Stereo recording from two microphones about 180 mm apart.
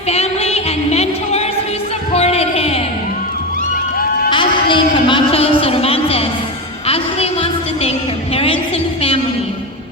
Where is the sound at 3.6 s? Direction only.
55° left (ahead or behind).